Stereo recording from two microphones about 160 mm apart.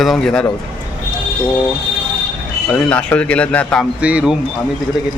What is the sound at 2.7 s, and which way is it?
Speech, 5° left (ahead or behind).